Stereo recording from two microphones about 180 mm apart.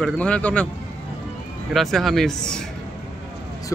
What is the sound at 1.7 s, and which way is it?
Speech, centre (ahead or behind).